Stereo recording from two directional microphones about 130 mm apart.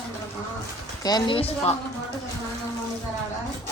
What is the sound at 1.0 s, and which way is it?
Speech, 30° left (ahead or behind).